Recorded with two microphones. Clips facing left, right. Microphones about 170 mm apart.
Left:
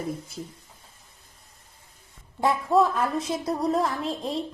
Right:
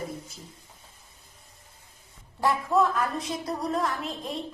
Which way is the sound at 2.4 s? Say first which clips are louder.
Left 2 dB; 20° left (ahead or behind).